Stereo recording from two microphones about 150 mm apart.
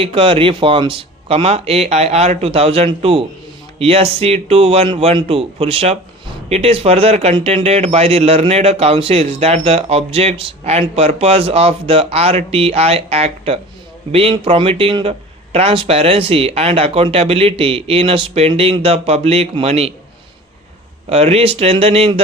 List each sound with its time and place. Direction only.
0.0 s speech: 35° right (ahead or behind)
21.1 s speech: 40° right (ahead or behind)